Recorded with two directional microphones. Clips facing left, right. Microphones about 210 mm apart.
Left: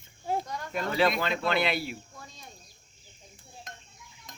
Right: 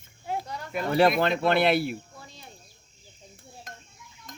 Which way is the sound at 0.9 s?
50° right (ahead or behind).